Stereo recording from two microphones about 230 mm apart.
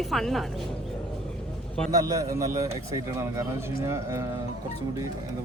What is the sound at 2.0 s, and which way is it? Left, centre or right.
Speech, centre.